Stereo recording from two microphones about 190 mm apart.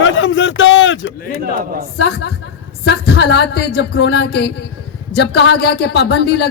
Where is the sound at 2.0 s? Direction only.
60° left (ahead or behind).